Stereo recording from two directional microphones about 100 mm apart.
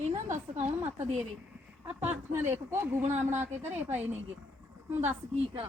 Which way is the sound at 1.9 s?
20° right (ahead or behind).